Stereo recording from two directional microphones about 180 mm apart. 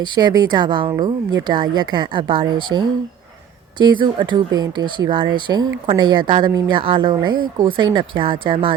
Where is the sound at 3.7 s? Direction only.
25° right (ahead or behind).